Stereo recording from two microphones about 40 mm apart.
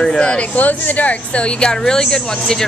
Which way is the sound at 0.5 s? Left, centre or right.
Left.